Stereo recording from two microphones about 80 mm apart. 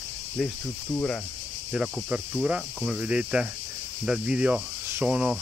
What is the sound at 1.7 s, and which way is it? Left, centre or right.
Speech, centre.